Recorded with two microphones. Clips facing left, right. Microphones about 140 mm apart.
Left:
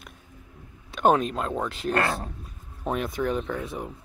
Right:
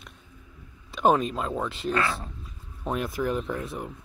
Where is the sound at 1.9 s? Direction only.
45° left (ahead or behind).